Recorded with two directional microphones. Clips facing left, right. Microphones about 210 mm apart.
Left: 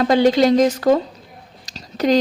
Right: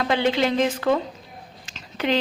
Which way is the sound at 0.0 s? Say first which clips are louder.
Left 7 dB; 40° left (ahead or behind).